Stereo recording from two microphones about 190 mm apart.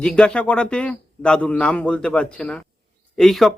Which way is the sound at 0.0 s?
5° left (ahead or behind).